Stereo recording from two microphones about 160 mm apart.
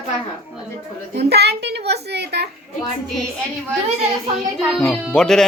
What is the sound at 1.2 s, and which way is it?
A child's voice, 90° right.